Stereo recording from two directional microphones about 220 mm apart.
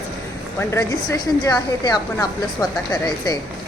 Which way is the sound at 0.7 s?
15° left (ahead or behind).